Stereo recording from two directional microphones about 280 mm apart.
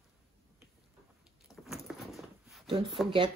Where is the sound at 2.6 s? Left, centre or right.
Centre.